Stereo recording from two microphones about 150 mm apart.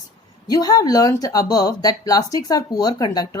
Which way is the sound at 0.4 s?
25° left (ahead or behind).